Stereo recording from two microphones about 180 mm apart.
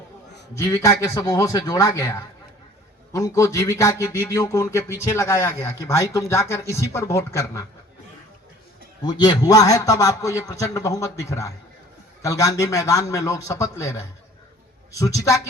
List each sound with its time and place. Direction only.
0.5 s a man's voice: 15° left (ahead or behind)
9.0 s a man's voice: 20° left (ahead or behind)